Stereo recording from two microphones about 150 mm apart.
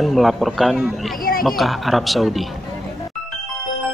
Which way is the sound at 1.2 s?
75° left (ahead or behind).